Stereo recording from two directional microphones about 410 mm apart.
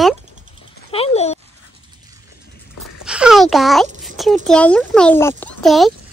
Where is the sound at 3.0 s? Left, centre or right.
Centre.